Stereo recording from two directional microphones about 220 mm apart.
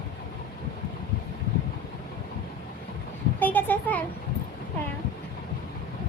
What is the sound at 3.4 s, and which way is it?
Speech, 10° left (ahead or behind).